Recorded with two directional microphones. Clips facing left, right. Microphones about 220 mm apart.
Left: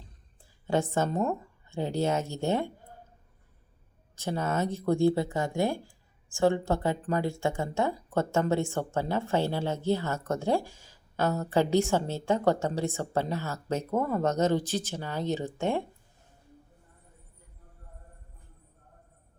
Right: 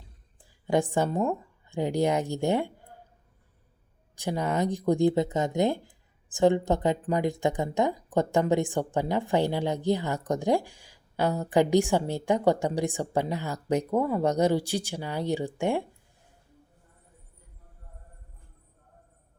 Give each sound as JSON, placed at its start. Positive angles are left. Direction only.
{"t": 0.7, "sound": "speech", "side_deg": -15}
{"t": 4.1, "sound": "speech", "side_deg": -15}